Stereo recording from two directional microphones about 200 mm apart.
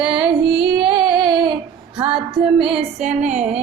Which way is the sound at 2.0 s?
30° right (ahead or behind).